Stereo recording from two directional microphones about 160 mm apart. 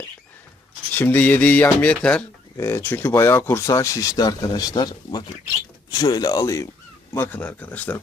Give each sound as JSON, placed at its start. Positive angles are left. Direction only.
{"t": 0.9, "sound": "speech", "side_deg": 10}